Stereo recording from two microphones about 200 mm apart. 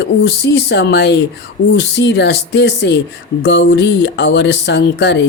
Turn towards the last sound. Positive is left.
turn(degrees=60)  # may be behind; listen again after turning